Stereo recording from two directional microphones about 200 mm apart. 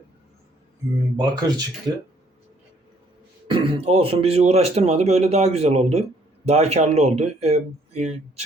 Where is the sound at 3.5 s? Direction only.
25° right (ahead or behind).